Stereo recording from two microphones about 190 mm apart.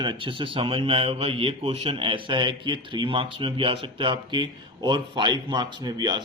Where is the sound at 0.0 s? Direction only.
25° right (ahead or behind).